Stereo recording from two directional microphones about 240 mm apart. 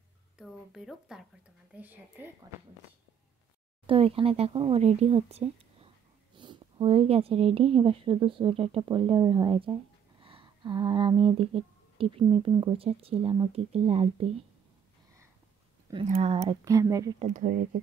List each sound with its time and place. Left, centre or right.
0.4 s speech: centre
3.8 s speech: right
15.9 s speech: right
16.6 s speech: centre
17.2 s speech: right